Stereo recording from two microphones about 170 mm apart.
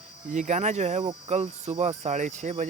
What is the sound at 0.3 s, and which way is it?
Speech, 45° right (ahead or behind).